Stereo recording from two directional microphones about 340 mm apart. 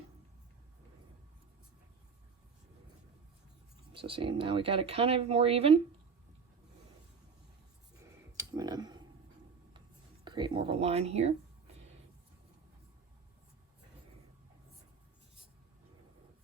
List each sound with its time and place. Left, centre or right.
3.9 s speech: centre
7.9 s a sound: centre
10.2 s speech: centre